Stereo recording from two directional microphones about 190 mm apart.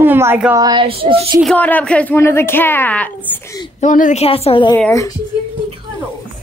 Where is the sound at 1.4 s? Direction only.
5° left (ahead or behind).